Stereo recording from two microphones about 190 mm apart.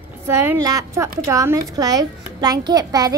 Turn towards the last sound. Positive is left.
turn(degrees=-20)  # may be behind; listen again after turning